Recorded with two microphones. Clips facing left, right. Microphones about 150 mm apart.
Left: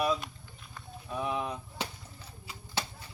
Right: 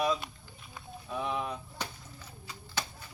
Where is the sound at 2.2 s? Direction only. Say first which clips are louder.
Right 1 dB; 30° left (ahead or behind).